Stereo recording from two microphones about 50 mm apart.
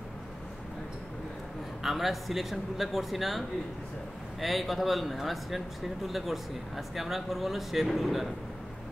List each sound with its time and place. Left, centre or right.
1.8 s speech: centre